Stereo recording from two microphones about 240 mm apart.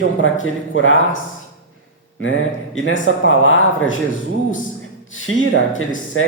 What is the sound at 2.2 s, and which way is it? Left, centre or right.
Speech, left.